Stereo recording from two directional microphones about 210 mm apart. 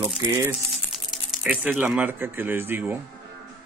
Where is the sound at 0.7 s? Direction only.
Centre (ahead or behind).